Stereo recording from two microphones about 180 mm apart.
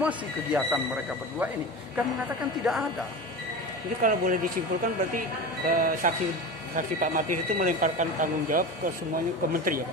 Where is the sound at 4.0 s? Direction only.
50° right (ahead or behind).